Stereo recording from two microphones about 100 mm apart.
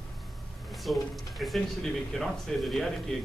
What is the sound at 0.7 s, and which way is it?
Speech, centre (ahead or behind).